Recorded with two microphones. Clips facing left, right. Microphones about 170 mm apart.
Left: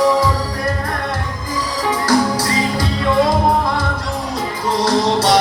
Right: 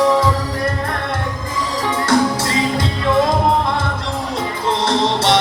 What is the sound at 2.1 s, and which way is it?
Music, 25° right (ahead or behind).